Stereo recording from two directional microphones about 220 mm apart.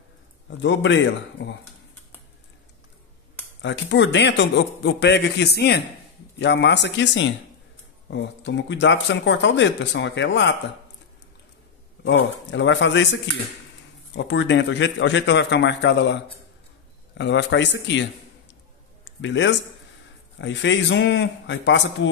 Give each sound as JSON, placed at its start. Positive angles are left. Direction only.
{"t": 0.6, "sound": "a man's voice", "side_deg": 55}
{"t": 3.6, "sound": "a man's voice", "side_deg": 55}
{"t": 12.0, "sound": "a man's voice", "side_deg": 55}
{"t": 19.0, "sound": "speech", "side_deg": 55}